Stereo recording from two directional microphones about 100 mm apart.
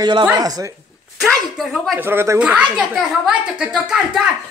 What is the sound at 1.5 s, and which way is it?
Speech, centre (ahead or behind).